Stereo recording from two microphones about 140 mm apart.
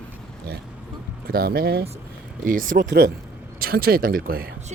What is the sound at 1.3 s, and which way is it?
Speech, 90° right.